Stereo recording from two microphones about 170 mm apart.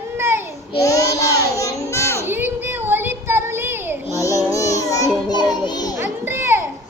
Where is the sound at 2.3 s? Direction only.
10° right (ahead or behind).